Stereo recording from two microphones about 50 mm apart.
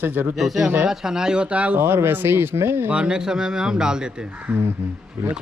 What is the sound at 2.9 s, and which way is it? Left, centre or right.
A man's voice, centre.